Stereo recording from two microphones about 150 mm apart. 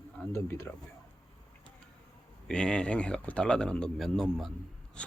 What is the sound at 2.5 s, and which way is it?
Speech, 5° left (ahead or behind).